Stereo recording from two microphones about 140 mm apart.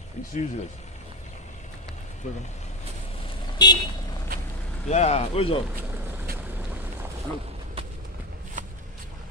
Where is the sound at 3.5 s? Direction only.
30° left (ahead or behind).